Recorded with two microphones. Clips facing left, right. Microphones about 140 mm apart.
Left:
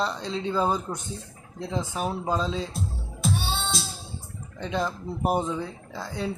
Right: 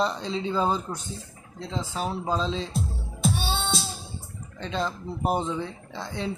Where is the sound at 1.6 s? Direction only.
10° left (ahead or behind).